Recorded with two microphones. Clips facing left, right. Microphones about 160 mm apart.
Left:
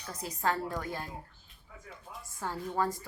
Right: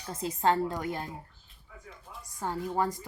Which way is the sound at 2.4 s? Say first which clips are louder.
Right 2 dB; 15° right (ahead or behind).